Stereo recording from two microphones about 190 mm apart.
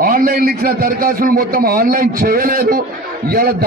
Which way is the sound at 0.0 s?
50° right (ahead or behind).